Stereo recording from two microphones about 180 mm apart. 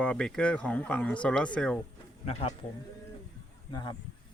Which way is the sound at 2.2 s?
35° left (ahead or behind).